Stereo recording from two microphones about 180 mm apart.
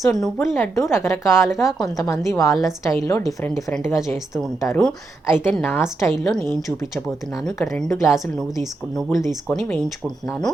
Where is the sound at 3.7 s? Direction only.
5° left (ahead or behind).